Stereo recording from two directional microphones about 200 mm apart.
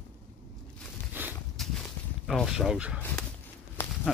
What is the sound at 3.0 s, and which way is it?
Dog, 5° left (ahead or behind).